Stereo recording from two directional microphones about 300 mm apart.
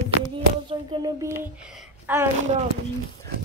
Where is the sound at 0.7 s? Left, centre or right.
Centre.